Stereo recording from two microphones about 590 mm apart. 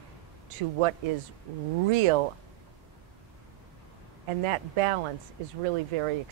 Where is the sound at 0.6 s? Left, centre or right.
Right.